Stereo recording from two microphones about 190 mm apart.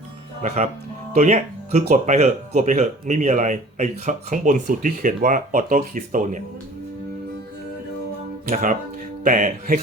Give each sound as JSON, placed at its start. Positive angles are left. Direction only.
{"t": 0.4, "sound": "speech", "side_deg": -35}
{"t": 8.4, "sound": "speech", "side_deg": -45}